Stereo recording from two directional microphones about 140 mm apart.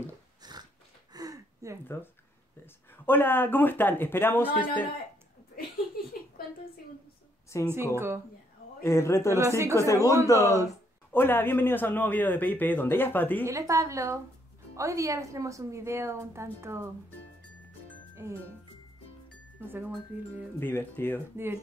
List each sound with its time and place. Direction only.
0.4 s biting: 30° right (ahead or behind)
1.1 s a sound: 25° right (ahead or behind)
2.6 s a man's voice: 15° left (ahead or behind)
7.6 s speech: 15° right (ahead or behind)
8.8 s a man's voice: 20° left (ahead or behind)
9.3 s a woman's voice: 20° right (ahead or behind)
9.8 s a man's voice: 20° left (ahead or behind)
13.5 s a woman's voice: 20° right (ahead or behind)
18.2 s a woman's voice: 20° right (ahead or behind)
20.5 s a man's voice: 15° left (ahead or behind)